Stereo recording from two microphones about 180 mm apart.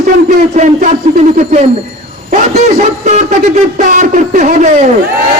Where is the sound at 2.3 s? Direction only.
40° right (ahead or behind).